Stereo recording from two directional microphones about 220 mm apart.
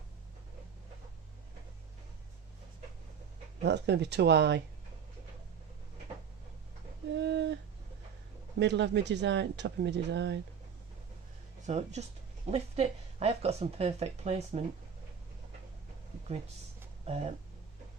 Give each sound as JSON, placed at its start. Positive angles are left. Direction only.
{"t": 3.6, "sound": "speech", "side_deg": -50}
{"t": 7.2, "sound": "a sound", "side_deg": -50}
{"t": 8.5, "sound": "speech", "side_deg": -50}
{"t": 11.6, "sound": "speech", "side_deg": -30}